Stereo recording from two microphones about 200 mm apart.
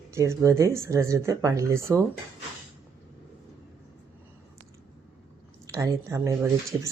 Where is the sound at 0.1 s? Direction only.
15° right (ahead or behind).